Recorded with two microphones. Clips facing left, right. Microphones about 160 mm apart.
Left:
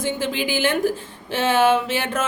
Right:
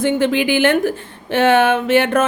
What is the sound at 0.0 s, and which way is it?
A woman's voice, 60° right (ahead or behind).